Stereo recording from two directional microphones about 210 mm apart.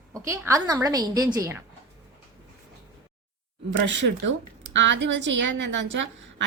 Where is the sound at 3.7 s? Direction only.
60° right (ahead or behind).